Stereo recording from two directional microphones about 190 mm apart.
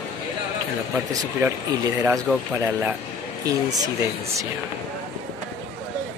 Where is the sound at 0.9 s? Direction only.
10° right (ahead or behind).